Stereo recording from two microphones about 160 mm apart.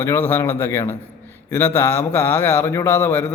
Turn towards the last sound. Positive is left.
turn(degrees=15)  # may be behind; listen again after turning